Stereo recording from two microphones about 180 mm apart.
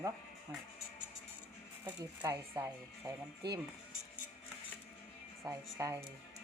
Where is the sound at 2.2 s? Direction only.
15° right (ahead or behind).